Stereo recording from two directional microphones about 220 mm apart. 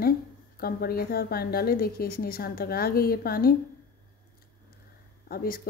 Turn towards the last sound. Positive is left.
turn(degrees=40)  # may be behind; listen again after turning